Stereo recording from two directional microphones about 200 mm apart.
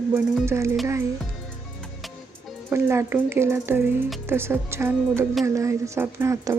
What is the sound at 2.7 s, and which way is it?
Speech, 15° right (ahead or behind).